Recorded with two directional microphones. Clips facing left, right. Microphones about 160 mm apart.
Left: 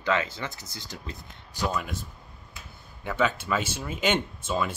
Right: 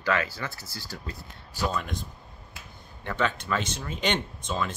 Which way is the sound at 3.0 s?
5° left (ahead or behind).